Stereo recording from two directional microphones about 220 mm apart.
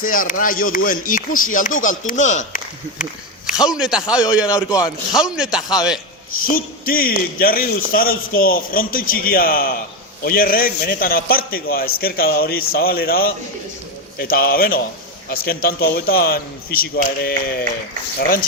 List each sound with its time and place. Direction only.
0.0 s a man's voice: 40° left (ahead or behind)
3.6 s speech: centre (ahead or behind)
6.4 s a man's voice: 40° left (ahead or behind)